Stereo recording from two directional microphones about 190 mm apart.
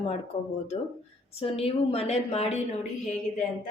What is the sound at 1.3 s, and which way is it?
A woman's voice, 30° left (ahead or behind).